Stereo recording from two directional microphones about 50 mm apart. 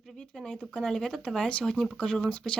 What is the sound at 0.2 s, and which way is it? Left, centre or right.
Speech, centre.